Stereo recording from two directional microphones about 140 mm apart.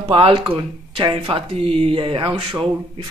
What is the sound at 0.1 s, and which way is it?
Speech, 40° right (ahead or behind).